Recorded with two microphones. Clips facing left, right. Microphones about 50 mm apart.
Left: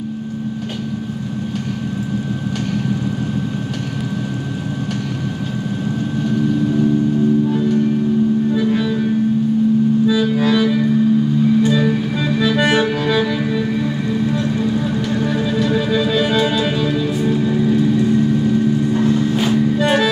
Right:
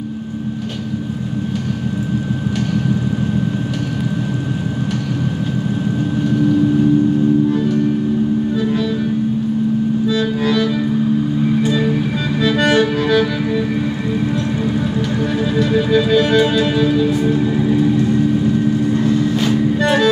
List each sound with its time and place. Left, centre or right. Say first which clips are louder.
10.0 s music: left 1 dB; centre
12.4 s accordion: right 2 dB; centre
13.0 s music: right 2 dB; centre
15.3 s music: right 4 dB; centre
19.3 s music: even; centre